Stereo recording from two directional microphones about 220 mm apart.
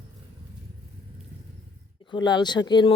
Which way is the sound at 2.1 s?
20° left (ahead or behind).